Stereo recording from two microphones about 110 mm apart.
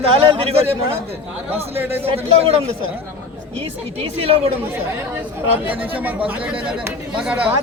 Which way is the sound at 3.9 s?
60° right (ahead or behind).